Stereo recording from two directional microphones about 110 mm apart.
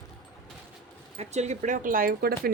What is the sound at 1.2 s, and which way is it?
Speech, 90° right.